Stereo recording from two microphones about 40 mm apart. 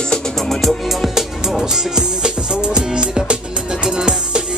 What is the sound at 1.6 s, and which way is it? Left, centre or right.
Music, centre.